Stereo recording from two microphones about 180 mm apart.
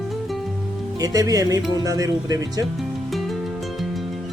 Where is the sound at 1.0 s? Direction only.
20° right (ahead or behind).